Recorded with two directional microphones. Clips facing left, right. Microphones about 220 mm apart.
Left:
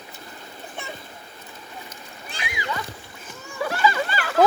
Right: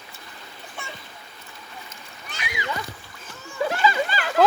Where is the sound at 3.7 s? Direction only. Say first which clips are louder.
Left 1 dB; 20° right (ahead or behind).